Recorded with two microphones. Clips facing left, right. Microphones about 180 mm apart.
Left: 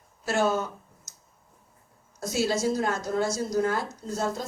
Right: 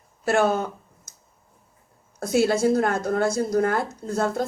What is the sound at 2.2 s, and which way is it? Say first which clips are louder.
A woman's voice: right 6 dB; 55° right (ahead or behind).